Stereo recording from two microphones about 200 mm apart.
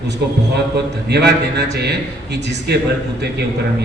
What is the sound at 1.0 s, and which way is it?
A man's voice, 55° right (ahead or behind).